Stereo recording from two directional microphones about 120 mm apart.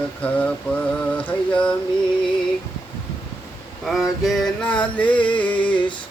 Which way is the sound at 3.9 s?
Centre (ahead or behind).